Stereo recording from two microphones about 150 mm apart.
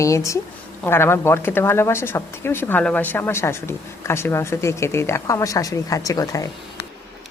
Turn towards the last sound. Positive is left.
turn(degrees=20)  # may be behind; listen again after turning